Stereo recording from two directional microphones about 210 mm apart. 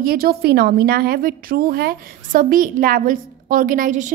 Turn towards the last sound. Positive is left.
turn(degrees=-35)  # may be behind; listen again after turning